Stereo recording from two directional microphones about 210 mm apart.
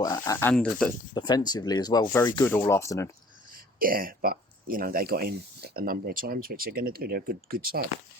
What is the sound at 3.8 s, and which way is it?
Speech, 45° right (ahead or behind).